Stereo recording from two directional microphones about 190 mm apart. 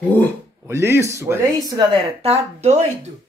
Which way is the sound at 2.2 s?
30° right (ahead or behind).